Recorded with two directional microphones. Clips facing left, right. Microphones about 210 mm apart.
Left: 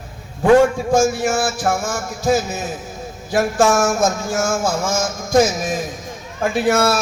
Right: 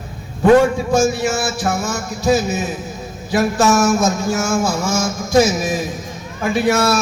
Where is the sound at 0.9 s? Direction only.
50° left (ahead or behind).